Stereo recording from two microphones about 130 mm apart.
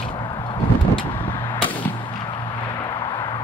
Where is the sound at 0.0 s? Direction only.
40° left (ahead or behind).